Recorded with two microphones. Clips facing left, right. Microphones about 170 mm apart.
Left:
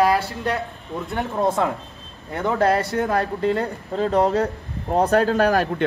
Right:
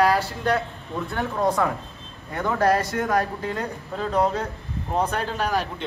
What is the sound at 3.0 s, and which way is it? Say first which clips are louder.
Speech: left 3 dB; 35° left (ahead or behind).